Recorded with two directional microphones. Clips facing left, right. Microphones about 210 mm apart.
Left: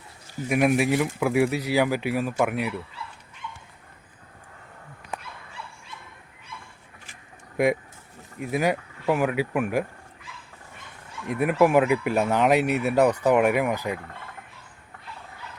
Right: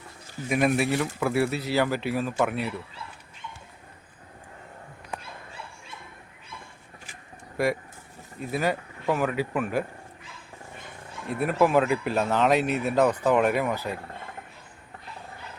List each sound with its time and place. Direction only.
0.4 s speech: 10° left (ahead or behind)
7.5 s speech: 20° left (ahead or behind)
11.3 s speech: 15° left (ahead or behind)